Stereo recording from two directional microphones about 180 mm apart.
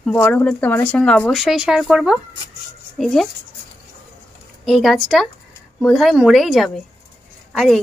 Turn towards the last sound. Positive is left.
turn(degrees=0)  # may be behind; listen again after turning